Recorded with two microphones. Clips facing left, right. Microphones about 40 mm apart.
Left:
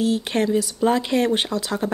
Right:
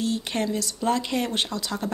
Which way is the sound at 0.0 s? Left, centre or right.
Left.